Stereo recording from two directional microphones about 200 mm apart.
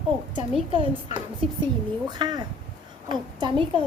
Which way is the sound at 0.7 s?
25° right (ahead or behind).